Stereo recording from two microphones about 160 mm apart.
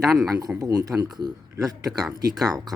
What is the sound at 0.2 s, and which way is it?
Speech, 20° right (ahead or behind).